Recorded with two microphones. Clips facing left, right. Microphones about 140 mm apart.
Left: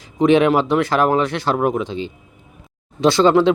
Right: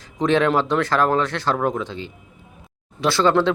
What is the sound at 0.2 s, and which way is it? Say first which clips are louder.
Speech: left 4 dB; 15° left (ahead or behind).